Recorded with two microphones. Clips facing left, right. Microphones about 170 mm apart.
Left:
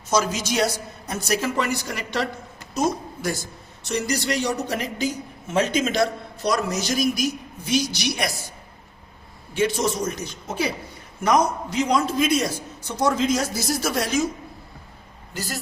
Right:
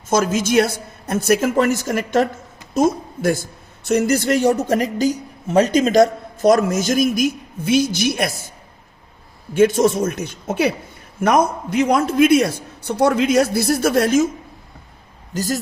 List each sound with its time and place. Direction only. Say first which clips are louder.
0.1 s a woman's voice: right 6 dB; 50° right (ahead or behind)
9.6 s a man's voice: right 8 dB; 50° right (ahead or behind)
15.3 s speech: right 9 dB; 40° right (ahead or behind)